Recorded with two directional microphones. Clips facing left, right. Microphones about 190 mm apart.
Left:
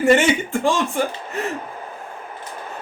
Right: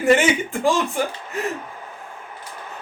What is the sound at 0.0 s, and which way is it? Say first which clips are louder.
Speech: left 1 dB; centre (ahead or behind).